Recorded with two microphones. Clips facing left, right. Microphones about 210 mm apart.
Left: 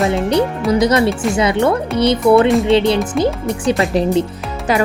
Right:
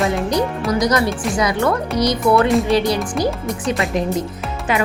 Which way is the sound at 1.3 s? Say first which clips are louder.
Left 2 dB; 25° left (ahead or behind).